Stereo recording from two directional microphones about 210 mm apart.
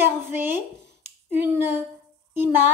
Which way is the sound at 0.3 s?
10° right (ahead or behind).